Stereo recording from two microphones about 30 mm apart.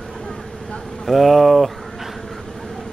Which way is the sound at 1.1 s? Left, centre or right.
Centre.